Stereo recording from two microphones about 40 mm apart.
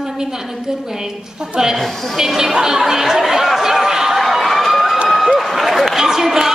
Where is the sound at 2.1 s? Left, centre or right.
Centre.